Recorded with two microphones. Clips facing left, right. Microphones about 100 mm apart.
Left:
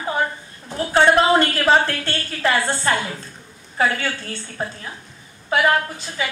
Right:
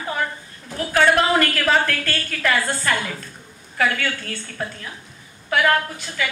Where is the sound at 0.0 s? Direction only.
25° left (ahead or behind).